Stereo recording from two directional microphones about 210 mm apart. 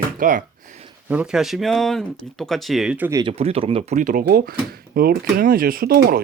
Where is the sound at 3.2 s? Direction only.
25° right (ahead or behind); by 6.2 s 45° right (ahead or behind).